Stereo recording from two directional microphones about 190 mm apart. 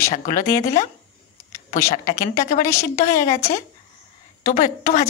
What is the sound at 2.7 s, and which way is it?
Speech, 15° left (ahead or behind).